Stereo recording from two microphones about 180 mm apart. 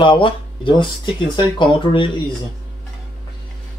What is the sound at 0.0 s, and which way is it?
Speech, 30° left (ahead or behind).